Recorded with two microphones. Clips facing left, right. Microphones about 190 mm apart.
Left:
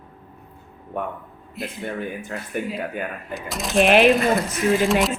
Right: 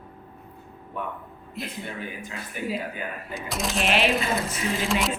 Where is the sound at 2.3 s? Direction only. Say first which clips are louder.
Left 6 dB; 55° left (ahead or behind).